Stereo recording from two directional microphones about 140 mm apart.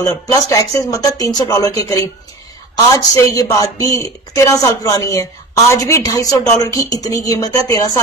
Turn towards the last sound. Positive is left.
turn(degrees=25)  # may be behind; listen again after turning